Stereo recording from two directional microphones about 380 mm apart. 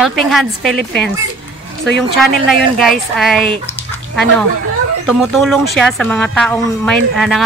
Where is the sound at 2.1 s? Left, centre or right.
Centre.